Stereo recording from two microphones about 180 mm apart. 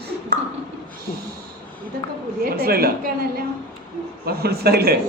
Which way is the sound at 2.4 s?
55° right (ahead or behind).